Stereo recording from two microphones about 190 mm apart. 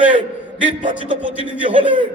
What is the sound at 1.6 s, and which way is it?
Speech, 25° right (ahead or behind).